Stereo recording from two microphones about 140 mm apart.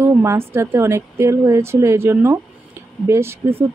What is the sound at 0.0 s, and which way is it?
Speech, 20° right (ahead or behind).